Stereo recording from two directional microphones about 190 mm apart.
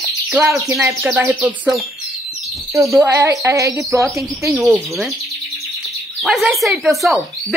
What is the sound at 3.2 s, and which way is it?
Speech, 15° right (ahead or behind).